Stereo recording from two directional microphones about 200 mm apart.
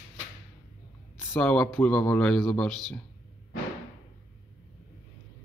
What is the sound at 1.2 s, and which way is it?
Speech, 10° left (ahead or behind).